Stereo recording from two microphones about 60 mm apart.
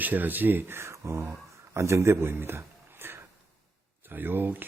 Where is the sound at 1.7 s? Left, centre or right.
Right.